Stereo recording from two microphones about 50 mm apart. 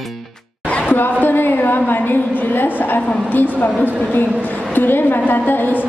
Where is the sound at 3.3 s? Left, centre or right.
Left.